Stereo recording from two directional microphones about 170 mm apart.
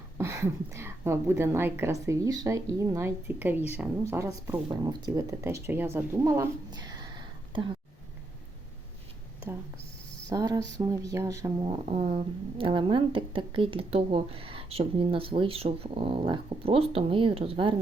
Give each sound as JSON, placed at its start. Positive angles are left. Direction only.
{"t": 0.2, "sound": "a woman's voice", "side_deg": -15}
{"t": 10.2, "sound": "a sound", "side_deg": -20}
{"t": 11.6, "sound": "speech", "side_deg": -35}